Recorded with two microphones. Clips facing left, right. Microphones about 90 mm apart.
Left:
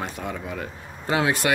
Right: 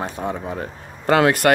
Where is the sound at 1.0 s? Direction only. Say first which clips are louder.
Right 7 dB; 60° right (ahead or behind).